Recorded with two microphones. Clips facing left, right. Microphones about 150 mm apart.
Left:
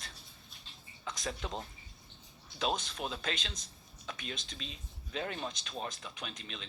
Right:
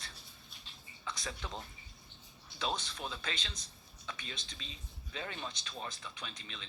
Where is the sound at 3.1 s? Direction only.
50° left (ahead or behind).